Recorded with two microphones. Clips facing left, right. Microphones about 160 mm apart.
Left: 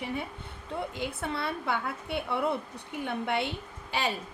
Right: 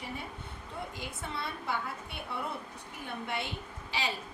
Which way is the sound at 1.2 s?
65° left (ahead or behind).